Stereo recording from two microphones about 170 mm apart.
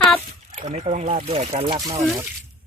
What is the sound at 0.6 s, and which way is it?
Speech, 45° right (ahead or behind).